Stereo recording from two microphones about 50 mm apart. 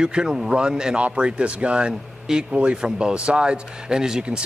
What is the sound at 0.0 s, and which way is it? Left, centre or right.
Speech, centre.